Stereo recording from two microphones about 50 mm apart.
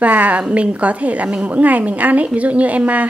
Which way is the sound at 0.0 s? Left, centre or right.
Right.